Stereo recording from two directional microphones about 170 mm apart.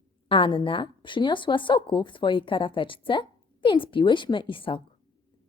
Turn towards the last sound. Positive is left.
turn(degrees=30)  # may be behind; listen again after turning